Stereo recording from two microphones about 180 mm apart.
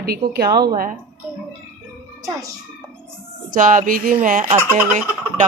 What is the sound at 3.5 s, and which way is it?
Music, 45° right (ahead or behind).